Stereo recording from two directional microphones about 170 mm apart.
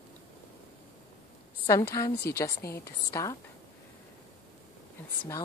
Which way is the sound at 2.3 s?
15° left (ahead or behind).